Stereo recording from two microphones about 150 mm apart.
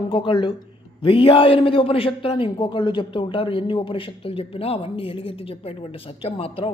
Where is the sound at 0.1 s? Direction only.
30° left (ahead or behind).